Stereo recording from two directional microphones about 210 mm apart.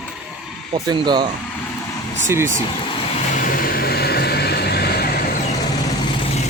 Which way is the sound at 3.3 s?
40° left (ahead or behind).